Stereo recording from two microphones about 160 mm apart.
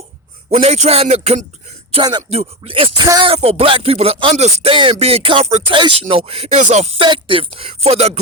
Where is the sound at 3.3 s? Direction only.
40° right (ahead or behind).